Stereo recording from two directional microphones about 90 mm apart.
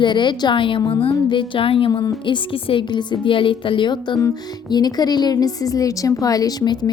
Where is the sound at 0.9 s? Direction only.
75° left (ahead or behind).